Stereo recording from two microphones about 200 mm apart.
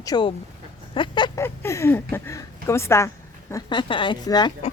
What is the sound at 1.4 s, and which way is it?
Speech, 15° left (ahead or behind).